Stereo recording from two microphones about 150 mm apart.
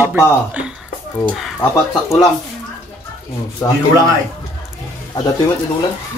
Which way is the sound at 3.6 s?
15° left (ahead or behind).